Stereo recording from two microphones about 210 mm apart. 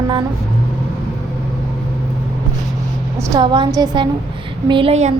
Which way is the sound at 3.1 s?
15° right (ahead or behind).